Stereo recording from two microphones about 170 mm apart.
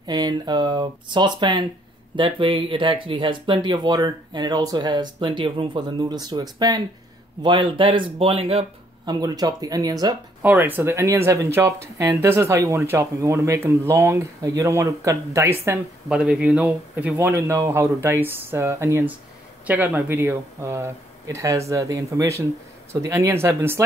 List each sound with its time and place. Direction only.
0.0 s speech: 25° right (ahead or behind)
9.2 s speech: 20° right (ahead or behind)
10.4 s speech: 10° right (ahead or behind)